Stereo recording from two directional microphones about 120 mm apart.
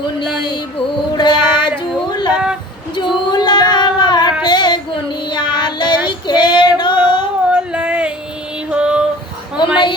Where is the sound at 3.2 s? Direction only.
40° left (ahead or behind).